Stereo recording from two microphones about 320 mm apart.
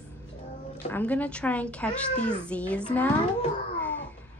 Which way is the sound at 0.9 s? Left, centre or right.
Centre.